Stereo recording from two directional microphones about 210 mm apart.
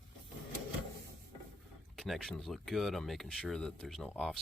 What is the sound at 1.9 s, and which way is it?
Speech, centre (ahead or behind).